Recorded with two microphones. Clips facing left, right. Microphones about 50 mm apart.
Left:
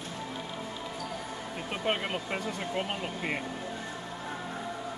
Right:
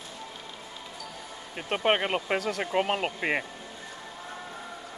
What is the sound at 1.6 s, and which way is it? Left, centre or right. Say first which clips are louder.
Speech: right 6 dB; right.